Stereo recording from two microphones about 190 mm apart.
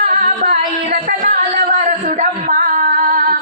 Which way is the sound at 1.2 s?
45° right (ahead or behind).